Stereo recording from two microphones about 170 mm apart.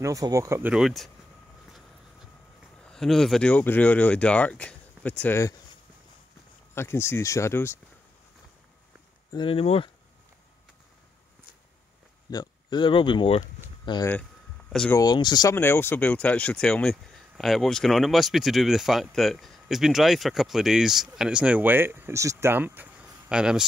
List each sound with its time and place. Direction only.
0.0 s speech: 20° right (ahead or behind); by 1.1 s centre (ahead or behind)
2.8 s speech: 5° left (ahead or behind)
6.7 s speech: 15° left (ahead or behind)
9.3 s speech: 30° left (ahead or behind)
12.3 s speech: 25° left (ahead or behind)
15.5 s speech: 15° left (ahead or behind); by 23.6 s 5° right (ahead or behind)